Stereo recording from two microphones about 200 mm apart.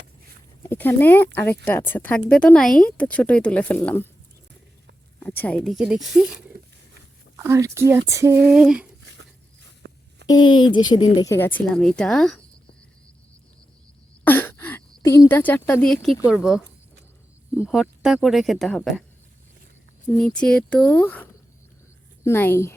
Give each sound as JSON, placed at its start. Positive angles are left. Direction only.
{"t": 0.6, "sound": "speech", "side_deg": 10}
{"t": 5.2, "sound": "speech", "side_deg": 10}
{"t": 7.3, "sound": "speech", "side_deg": -15}
{"t": 9.8, "sound": "a sound", "side_deg": -50}
{"t": 10.2, "sound": "speech", "side_deg": 20}
{"t": 14.3, "sound": "speech", "side_deg": 10}
{"t": 17.7, "sound": "speech", "side_deg": 0}
{"t": 20.1, "sound": "speech", "side_deg": 5}